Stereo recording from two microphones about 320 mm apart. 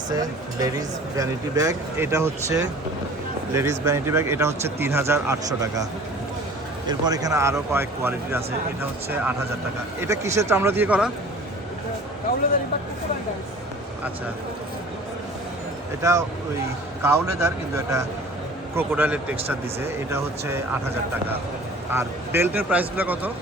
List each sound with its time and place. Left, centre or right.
0.1 s speech: centre
6.8 s speech: centre
10.0 s speech: centre
16.0 s speech: centre
21.9 s a man's voice: centre